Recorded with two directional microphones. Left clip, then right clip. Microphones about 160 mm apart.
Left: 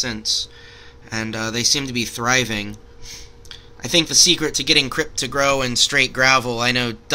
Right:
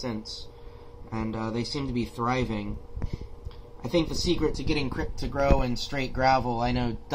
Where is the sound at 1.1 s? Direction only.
15° left (ahead or behind).